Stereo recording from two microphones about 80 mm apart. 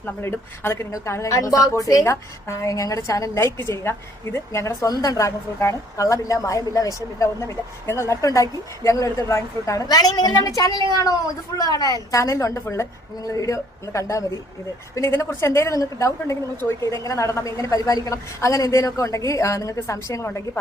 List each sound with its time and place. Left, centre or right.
0.0 s a woman's voice: left
20.2 s a woman's voice: left